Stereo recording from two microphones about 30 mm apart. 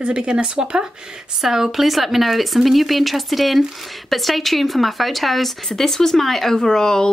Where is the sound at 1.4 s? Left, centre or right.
Centre.